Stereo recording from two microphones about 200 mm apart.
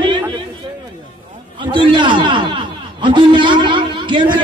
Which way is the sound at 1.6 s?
25° right (ahead or behind).